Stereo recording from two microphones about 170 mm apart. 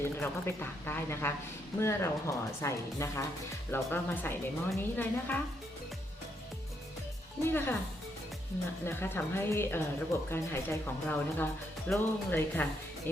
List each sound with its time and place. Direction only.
0.0 s a woman's voice: 15° left (ahead or behind)
7.4 s a woman's voice: 10° left (ahead or behind)
8.8 s a woman's voice: 15° left (ahead or behind)